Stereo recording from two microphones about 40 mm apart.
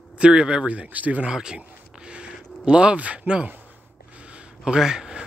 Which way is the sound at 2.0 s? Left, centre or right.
Right.